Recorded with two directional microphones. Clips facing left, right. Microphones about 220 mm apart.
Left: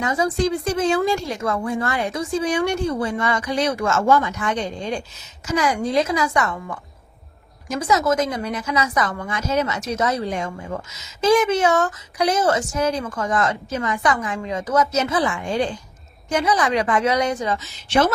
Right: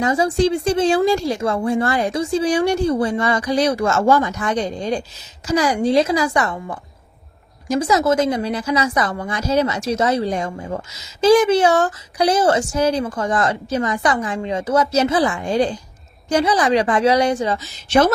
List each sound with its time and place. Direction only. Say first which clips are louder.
0.0 s a woman's voice: right 4 dB; 30° right (ahead or behind)